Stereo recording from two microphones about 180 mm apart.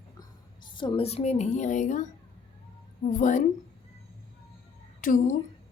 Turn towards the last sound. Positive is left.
turn(degrees=45)  # may be behind; listen again after turning